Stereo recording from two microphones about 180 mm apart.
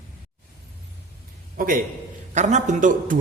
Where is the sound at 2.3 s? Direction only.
40° right (ahead or behind).